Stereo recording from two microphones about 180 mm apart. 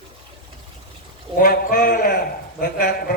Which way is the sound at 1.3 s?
50° left (ahead or behind).